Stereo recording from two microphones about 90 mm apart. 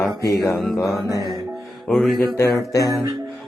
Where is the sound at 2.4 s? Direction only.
35° left (ahead or behind).